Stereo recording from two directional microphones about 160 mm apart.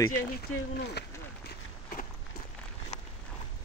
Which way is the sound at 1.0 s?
90° left.